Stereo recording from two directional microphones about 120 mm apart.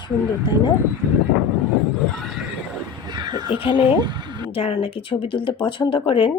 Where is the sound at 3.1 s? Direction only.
35° right (ahead or behind).